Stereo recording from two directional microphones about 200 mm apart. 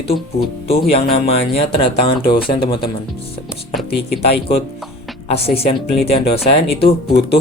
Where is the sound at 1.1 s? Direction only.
30° left (ahead or behind).